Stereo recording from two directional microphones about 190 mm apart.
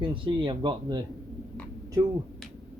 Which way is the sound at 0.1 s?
25° right (ahead or behind).